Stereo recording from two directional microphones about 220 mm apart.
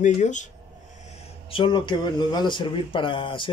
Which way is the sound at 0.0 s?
35° left (ahead or behind).